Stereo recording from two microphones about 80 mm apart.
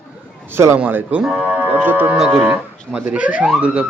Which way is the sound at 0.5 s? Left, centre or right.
Right.